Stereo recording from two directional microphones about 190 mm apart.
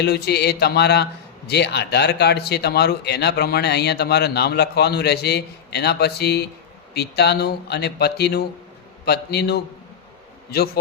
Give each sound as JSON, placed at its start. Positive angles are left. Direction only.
{"t": 0.0, "sound": "speech", "side_deg": 60}